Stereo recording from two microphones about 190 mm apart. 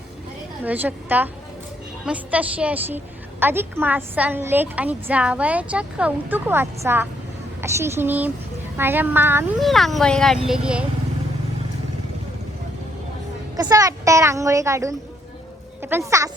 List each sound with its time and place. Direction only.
0.6 s a woman's voice: 10° right (ahead or behind)
9.6 s speech: centre (ahead or behind)
13.6 s a woman's voice: 20° right (ahead or behind)